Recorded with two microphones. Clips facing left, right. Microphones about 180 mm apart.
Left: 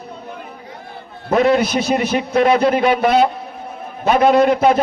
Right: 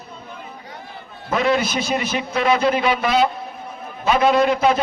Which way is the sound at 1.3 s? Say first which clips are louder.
Left 5 dB; 50° left (ahead or behind).